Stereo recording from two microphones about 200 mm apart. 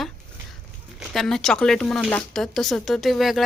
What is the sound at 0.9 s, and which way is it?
Speech, centre (ahead or behind).